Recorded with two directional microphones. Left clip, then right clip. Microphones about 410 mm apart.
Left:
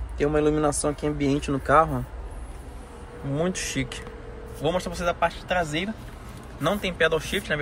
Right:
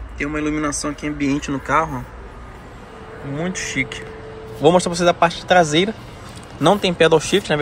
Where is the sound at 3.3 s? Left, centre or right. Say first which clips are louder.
Right 4 dB; centre.